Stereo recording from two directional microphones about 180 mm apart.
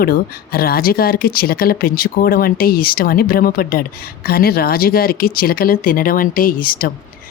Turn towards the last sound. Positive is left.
turn(degrees=50)  # may be behind; listen again after turning